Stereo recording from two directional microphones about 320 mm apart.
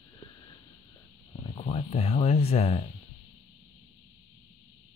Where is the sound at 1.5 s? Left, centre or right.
Centre.